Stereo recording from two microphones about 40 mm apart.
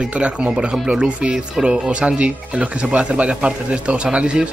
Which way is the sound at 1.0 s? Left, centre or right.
Right.